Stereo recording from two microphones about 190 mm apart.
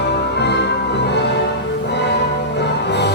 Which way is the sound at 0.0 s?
60° left (ahead or behind).